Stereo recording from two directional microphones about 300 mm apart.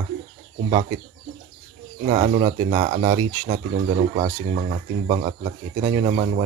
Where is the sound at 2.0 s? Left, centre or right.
Right.